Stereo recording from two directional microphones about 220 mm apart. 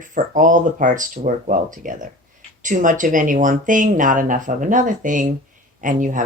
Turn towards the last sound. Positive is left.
turn(degrees=-35)  # may be behind; listen again after turning